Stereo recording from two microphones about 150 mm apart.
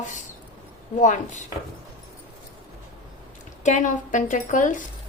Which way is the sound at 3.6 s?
55° left (ahead or behind).